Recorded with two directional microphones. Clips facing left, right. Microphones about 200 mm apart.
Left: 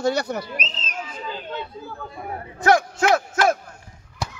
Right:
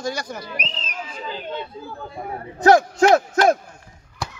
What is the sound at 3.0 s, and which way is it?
Speech, 35° right (ahead or behind).